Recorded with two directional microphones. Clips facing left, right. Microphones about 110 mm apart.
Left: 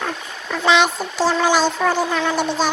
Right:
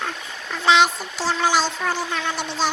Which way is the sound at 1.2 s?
50° left (ahead or behind).